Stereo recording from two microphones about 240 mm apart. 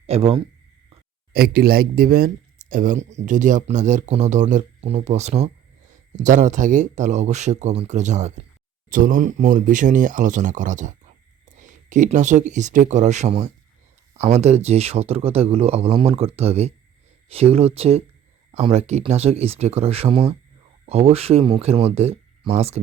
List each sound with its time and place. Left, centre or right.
0.1 s speech: right
1.3 s a man's voice: right